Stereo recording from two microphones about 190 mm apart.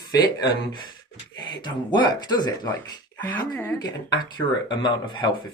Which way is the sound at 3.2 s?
10° left (ahead or behind).